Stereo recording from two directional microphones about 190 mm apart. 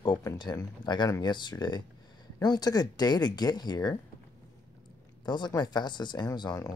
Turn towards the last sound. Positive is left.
turn(degrees=20)  # may be behind; listen again after turning